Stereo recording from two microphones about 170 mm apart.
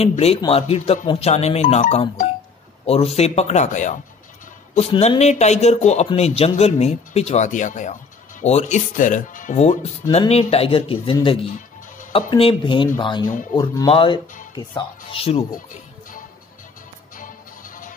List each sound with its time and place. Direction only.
0.0 s speech: 35° left (ahead or behind)
4.7 s speech: 35° left (ahead or behind)
17.2 s music: 50° left (ahead or behind)